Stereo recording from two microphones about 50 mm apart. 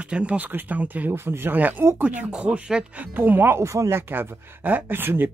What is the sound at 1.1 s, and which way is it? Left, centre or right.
Speech, right.